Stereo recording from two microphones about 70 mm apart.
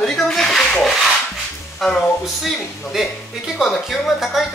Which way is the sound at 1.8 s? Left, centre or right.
Centre.